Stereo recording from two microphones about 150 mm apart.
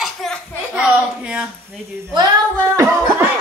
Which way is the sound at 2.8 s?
20° right (ahead or behind).